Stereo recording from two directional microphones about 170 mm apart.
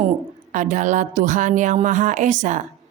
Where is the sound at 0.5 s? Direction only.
50° right (ahead or behind).